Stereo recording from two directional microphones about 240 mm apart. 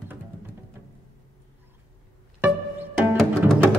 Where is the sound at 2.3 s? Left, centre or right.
Centre.